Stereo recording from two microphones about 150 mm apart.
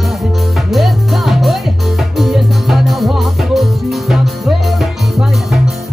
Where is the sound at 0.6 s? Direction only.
Centre (ahead or behind).